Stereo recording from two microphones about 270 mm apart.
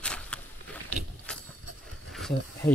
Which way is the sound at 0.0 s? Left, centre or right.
Centre.